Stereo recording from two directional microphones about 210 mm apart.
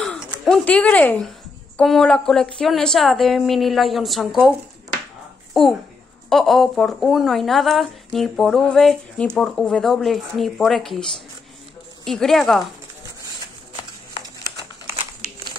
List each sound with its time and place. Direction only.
0.3 s speech: 5° left (ahead or behind)